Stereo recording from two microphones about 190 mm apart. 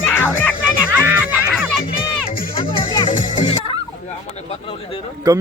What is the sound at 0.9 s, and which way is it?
Music, 10° right (ahead or behind).